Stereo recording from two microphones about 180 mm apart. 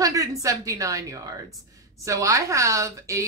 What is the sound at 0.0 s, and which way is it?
A woman's voice, 20° right (ahead or behind).